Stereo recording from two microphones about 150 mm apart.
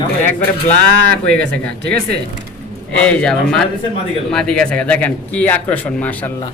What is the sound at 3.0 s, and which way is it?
A man's voice, 5° left (ahead or behind).